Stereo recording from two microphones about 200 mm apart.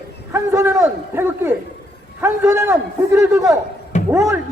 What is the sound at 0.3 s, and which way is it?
Speech, 15° right (ahead or behind).